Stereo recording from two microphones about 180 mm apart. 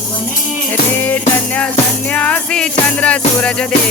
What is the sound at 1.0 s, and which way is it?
Music, 10° left (ahead or behind).